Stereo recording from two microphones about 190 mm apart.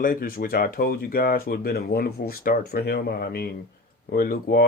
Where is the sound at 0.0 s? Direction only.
50° left (ahead or behind).